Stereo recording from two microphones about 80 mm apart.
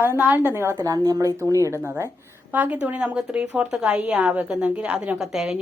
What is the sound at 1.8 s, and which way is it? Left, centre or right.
A woman's voice, right.